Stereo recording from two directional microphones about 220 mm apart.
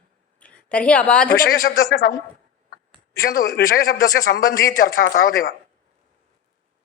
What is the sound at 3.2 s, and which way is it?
A man's voice, 40° left (ahead or behind).